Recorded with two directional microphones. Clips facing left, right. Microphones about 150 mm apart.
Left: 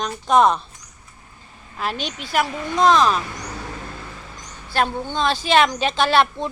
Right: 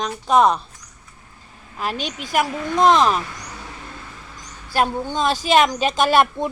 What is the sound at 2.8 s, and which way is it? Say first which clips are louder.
Speech: right 1 dB; 20° right (ahead or behind).